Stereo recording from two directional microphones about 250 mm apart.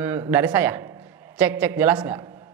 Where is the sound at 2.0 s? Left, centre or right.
Centre.